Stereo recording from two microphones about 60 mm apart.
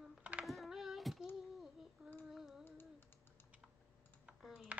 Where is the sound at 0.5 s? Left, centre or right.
Centre.